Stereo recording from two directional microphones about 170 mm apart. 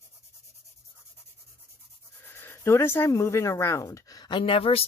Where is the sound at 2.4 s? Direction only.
15° left (ahead or behind).